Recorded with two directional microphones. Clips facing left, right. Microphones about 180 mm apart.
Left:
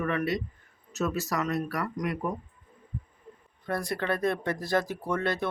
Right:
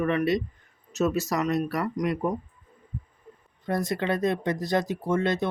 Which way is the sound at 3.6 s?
20° right (ahead or behind).